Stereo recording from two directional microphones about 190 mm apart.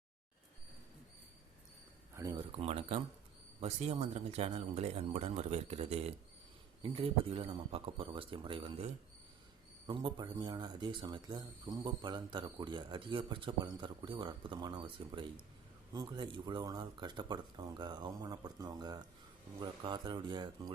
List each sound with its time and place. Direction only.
2.1 s speech: 15° right (ahead or behind)
2.6 s speech: 30° right (ahead or behind)